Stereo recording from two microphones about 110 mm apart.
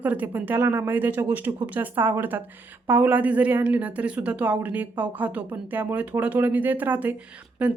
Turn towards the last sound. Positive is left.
turn(degrees=-10)  # may be behind; listen again after turning